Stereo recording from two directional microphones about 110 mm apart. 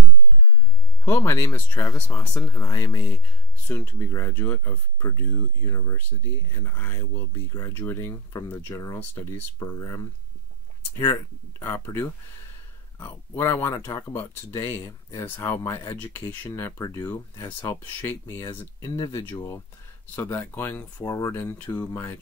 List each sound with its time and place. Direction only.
1.0 s speech: 20° left (ahead or behind); by 11.2 s 35° left (ahead or behind)
11.6 s speech: 20° left (ahead or behind)